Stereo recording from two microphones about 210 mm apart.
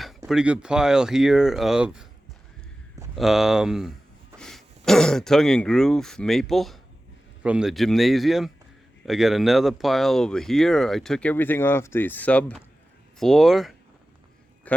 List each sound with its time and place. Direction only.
0.3 s speech: 5° right (ahead or behind)
3.2 s a man's voice: centre (ahead or behind)